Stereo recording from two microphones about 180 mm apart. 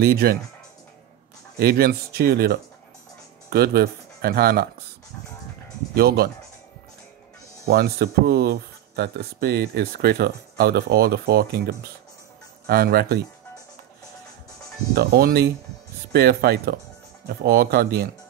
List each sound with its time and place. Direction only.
0.0 s speech: 60° right (ahead or behind)
1.6 s speech: 60° right (ahead or behind)
5.9 s speech: 60° right (ahead or behind)
7.6 s speech: 60° right (ahead or behind)
15.0 s speech: 60° right (ahead or behind)